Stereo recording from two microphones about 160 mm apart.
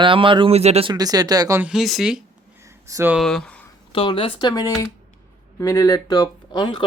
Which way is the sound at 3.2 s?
5° left (ahead or behind).